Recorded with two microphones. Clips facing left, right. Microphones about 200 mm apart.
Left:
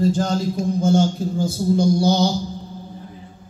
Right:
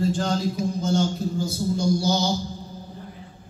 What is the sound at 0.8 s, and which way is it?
Music, 50° left (ahead or behind).